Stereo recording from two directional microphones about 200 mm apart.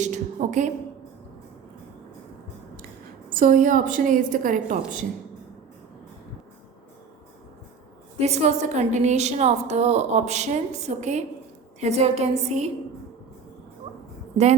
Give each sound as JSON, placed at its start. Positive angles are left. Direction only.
{"t": 0.0, "sound": "a sound", "side_deg": -35}
{"t": 3.2, "sound": "a woman's voice", "side_deg": -45}
{"t": 8.2, "sound": "a woman's voice", "side_deg": -35}